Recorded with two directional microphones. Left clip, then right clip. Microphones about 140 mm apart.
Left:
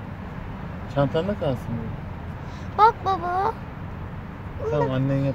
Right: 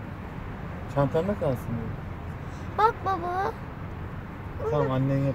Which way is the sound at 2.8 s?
20° right (ahead or behind).